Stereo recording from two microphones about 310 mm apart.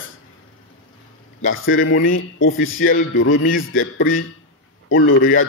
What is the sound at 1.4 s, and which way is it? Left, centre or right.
A man's voice, left.